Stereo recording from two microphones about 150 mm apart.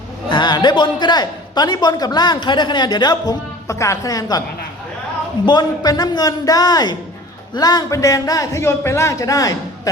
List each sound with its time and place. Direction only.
0.3 s a man's voice: 30° left (ahead or behind)
5.5 s a man's voice: 25° left (ahead or behind)